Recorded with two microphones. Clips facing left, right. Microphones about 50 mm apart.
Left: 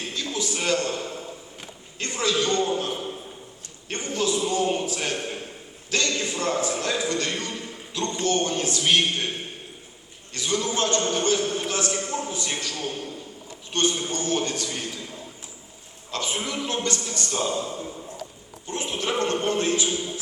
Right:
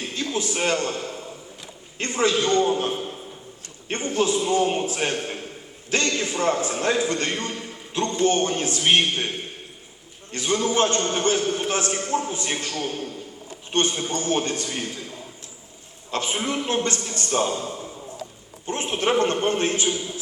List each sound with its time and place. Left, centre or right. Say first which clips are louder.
0.1 s a man's voice: right 3 dB; right
10.3 s a man's voice: right 4 dB; right
16.1 s a man's voice: right 3 dB; right